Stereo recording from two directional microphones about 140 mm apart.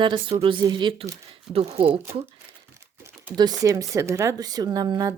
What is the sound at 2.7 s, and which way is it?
Typing, 20° right (ahead or behind).